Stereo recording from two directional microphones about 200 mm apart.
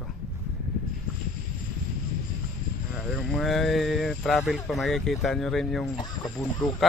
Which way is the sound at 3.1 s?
Centre (ahead or behind).